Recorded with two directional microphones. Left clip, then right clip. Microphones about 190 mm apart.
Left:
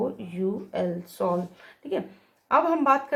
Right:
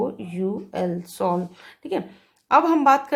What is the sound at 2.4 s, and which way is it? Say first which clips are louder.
Speech: right 5 dB; 20° right (ahead or behind).